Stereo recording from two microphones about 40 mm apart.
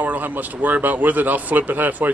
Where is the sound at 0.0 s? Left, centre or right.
Right.